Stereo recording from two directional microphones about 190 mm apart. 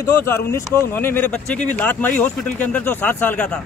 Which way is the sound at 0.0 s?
15° left (ahead or behind).